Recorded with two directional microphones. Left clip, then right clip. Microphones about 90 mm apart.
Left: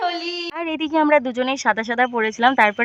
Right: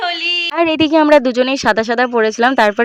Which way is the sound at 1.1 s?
55° right (ahead or behind).